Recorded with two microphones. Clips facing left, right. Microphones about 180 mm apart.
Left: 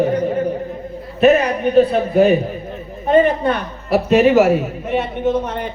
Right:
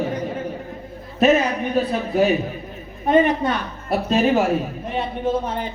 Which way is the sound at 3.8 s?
75° left (ahead or behind).